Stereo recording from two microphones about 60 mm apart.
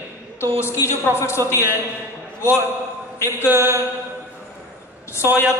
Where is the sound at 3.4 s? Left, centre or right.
Right.